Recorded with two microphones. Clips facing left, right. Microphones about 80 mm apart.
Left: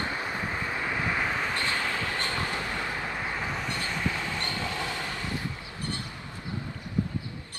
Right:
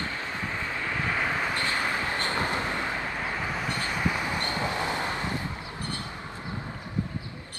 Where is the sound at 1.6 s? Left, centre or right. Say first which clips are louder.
Right 2 dB; right.